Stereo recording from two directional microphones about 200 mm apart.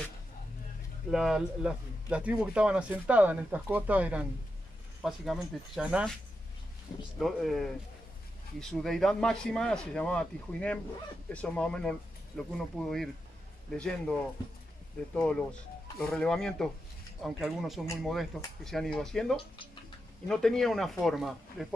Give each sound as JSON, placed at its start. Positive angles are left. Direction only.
{"t": 1.1, "sound": "speech", "side_deg": 0}
{"t": 7.2, "sound": "speech", "side_deg": 0}
{"t": 15.1, "sound": "speech", "side_deg": 5}